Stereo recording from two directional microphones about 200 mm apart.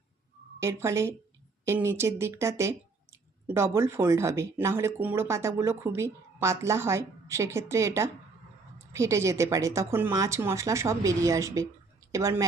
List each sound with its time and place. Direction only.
0.6 s speech: 15° right (ahead or behind)